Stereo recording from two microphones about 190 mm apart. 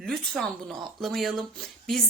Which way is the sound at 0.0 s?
Centre (ahead or behind).